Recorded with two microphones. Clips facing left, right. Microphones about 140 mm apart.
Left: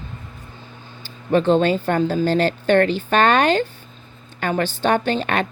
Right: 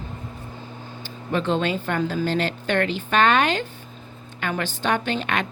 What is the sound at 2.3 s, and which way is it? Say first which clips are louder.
A woman's voice: left 6 dB; 35° left (ahead or behind).